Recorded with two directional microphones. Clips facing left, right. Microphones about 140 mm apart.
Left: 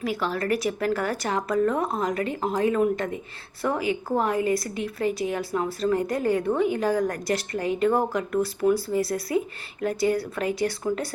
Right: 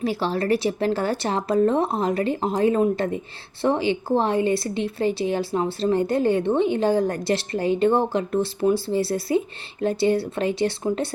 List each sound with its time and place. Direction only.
0.0 s speech: 30° right (ahead or behind)